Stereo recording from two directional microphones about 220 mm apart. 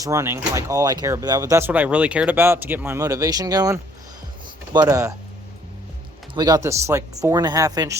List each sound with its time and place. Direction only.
0.0 s speech: 15° right (ahead or behind)
6.3 s speech: 15° right (ahead or behind)